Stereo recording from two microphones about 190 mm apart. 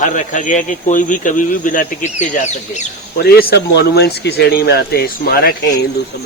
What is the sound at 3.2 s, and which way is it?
Speech, 55° left (ahead or behind).